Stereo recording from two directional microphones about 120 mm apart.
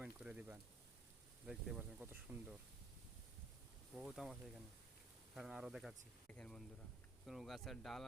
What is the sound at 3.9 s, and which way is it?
Speech, 5° right (ahead or behind).